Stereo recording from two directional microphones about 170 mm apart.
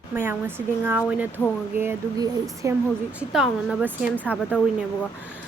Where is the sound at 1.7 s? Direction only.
15° right (ahead or behind).